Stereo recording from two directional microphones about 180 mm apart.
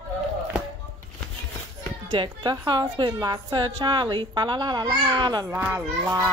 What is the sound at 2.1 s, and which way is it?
A child's voice, 25° right (ahead or behind).